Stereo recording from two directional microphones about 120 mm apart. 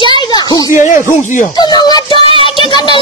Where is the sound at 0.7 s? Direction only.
90° left.